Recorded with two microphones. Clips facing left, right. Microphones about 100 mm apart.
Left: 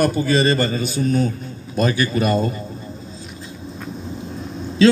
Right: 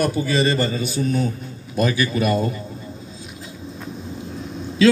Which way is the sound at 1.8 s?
30° left (ahead or behind).